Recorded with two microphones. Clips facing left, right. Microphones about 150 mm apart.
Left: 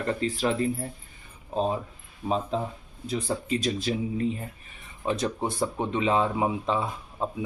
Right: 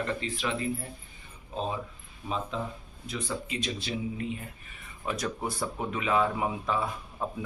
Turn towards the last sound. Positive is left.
turn(degrees=25)  # may be behind; listen again after turning